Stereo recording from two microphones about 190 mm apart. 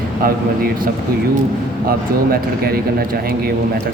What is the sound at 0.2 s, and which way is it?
Speech, 50° right (ahead or behind).